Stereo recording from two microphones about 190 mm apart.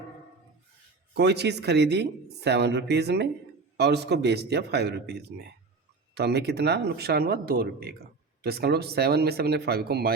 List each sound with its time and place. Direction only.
1.1 s speech: 60° right (ahead or behind)